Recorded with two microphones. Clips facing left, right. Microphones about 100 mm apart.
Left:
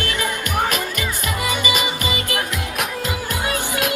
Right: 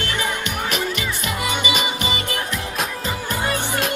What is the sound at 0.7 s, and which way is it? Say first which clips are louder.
Music: even; 45° left (ahead or behind).